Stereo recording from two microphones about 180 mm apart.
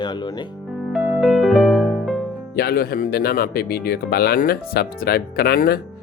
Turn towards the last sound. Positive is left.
turn(degrees=55)  # may be behind; listen again after turning